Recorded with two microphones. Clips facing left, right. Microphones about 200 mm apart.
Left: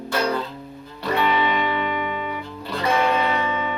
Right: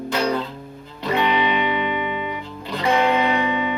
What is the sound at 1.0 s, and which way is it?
Music, 15° right (ahead or behind).